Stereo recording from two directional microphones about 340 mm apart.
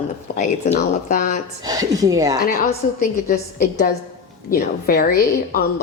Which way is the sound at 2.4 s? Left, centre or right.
Left.